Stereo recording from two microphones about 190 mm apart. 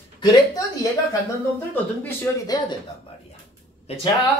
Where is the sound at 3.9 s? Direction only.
35° left (ahead or behind).